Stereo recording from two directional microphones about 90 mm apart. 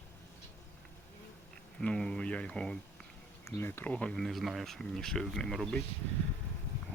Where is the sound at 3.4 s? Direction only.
25° left (ahead or behind).